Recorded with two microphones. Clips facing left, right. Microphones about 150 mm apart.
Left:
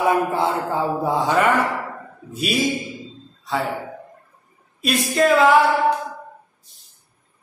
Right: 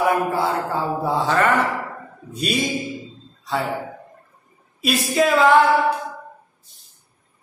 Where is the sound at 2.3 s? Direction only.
Centre (ahead or behind).